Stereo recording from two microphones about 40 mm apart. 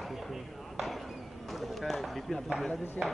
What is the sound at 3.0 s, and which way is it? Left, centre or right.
Speech, left.